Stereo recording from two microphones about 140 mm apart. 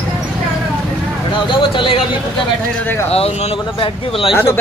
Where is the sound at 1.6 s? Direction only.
35° left (ahead or behind).